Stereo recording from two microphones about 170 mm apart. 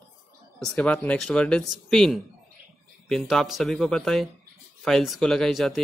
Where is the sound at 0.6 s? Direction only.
5° left (ahead or behind).